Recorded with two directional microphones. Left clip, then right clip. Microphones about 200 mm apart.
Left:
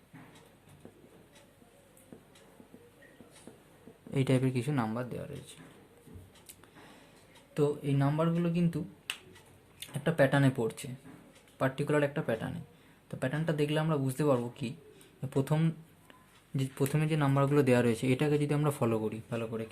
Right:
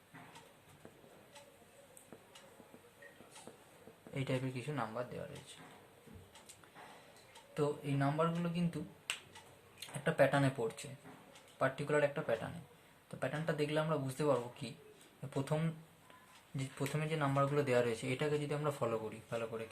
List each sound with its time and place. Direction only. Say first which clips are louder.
4.1 s speech: left 9 dB; 50° left (ahead or behind)
7.5 s speech: left 7 dB; 40° left (ahead or behind)
10.0 s speech: left 4 dB; 45° left (ahead or behind)